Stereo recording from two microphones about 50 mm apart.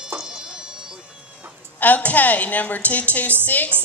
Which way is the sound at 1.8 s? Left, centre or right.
Left.